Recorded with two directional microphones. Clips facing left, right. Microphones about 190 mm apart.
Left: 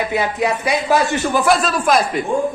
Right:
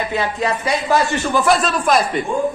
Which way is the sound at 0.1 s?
15° left (ahead or behind).